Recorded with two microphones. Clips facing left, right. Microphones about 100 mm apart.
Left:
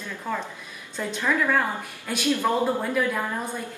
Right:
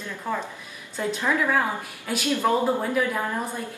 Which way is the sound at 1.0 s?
15° right (ahead or behind).